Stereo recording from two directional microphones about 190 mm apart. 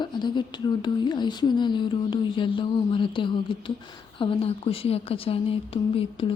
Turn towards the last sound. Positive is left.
turn(degrees=30)  # may be behind; listen again after turning